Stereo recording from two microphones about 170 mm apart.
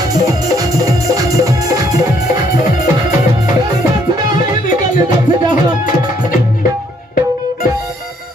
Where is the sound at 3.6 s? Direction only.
25° right (ahead or behind).